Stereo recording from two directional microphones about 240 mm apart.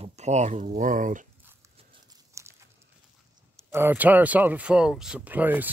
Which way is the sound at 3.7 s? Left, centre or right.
Centre.